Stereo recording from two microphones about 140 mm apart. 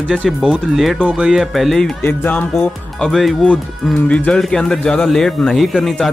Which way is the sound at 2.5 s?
Centre (ahead or behind).